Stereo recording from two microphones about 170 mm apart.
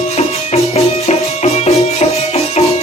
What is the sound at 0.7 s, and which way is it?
Music, 40° left (ahead or behind).